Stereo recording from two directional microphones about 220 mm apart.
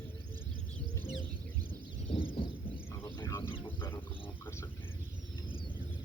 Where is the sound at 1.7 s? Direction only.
25° left (ahead or behind).